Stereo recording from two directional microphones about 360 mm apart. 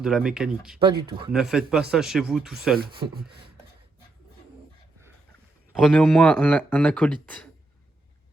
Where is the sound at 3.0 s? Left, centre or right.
Centre.